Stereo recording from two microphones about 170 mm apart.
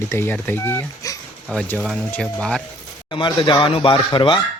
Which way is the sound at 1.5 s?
5° left (ahead or behind).